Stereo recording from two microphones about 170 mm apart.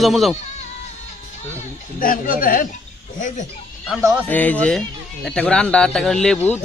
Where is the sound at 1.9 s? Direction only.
55° left (ahead or behind).